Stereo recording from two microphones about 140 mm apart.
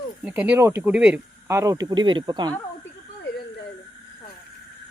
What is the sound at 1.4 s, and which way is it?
Speech, 20° right (ahead or behind).